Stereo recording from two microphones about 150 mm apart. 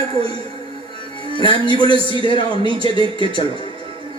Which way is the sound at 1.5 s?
35° right (ahead or behind).